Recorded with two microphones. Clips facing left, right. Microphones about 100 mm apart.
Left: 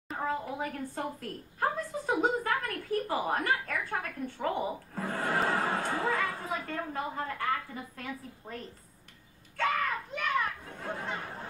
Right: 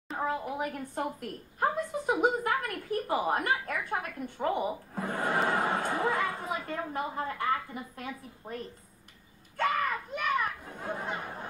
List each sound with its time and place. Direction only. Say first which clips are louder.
0.6 s a woman's voice: right 2 dB; 15° right (ahead or behind)
9.6 s children playing: right 1 dB; 5° right (ahead or behind)